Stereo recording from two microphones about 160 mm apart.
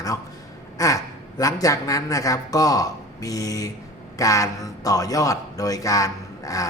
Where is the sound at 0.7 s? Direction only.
20° left (ahead or behind).